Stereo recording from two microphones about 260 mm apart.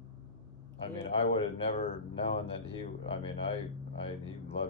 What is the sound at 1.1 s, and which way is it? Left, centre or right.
Speech, left.